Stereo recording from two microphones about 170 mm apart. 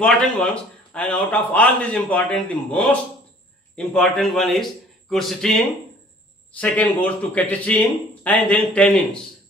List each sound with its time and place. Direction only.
0.0 s a man's voice: 5° left (ahead or behind)